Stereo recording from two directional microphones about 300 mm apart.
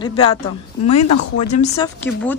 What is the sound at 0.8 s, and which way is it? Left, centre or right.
Speech, left.